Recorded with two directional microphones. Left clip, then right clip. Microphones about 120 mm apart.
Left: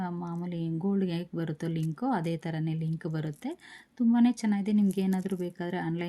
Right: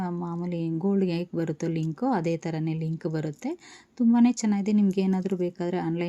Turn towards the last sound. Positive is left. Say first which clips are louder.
# right 5 dB
turn(degrees=-30)  # may be behind; listen again after turning